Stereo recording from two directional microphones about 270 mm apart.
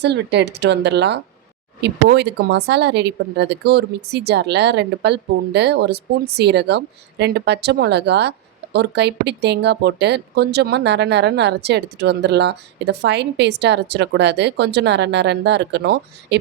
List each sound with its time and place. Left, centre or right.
0.0 s speech: right